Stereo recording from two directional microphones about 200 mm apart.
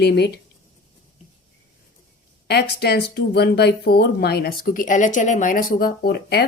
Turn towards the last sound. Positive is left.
turn(degrees=55)  # may be behind; listen again after turning